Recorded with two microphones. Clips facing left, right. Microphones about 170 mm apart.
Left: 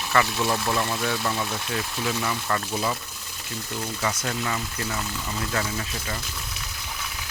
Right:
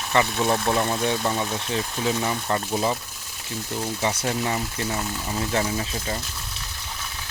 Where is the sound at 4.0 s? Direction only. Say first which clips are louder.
Right 3 dB; 25° right (ahead or behind).